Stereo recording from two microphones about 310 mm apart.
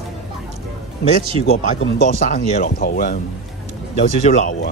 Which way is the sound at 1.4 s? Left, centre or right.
Left.